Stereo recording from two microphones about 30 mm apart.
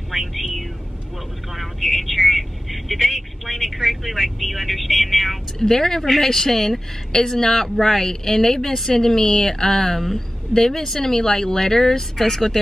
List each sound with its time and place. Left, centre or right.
0.1 s a sound: centre
1.5 s speech: centre
5.6 s speech: centre